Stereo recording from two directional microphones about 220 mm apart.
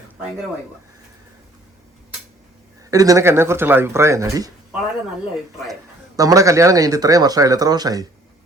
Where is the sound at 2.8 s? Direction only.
15° right (ahead or behind).